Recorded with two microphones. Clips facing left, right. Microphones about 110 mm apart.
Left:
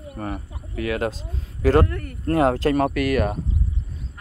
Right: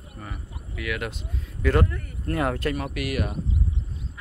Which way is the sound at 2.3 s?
30° left (ahead or behind).